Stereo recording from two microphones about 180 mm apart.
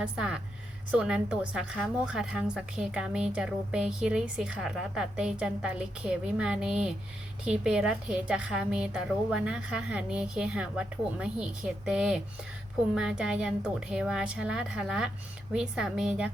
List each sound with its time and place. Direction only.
0.0 s a woman's voice: 5° right (ahead or behind)